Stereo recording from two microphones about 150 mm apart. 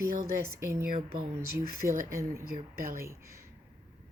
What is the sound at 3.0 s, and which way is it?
Speech, 20° right (ahead or behind).